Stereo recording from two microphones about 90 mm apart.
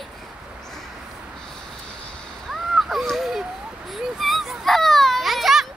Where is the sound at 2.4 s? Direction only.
Centre (ahead or behind).